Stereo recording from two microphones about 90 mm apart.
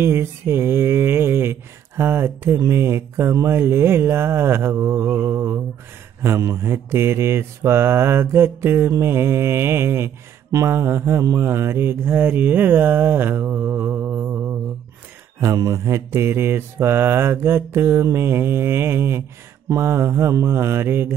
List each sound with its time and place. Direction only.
0.0 s mantra: 25° right (ahead or behind)
15.4 s mantra: 35° right (ahead or behind)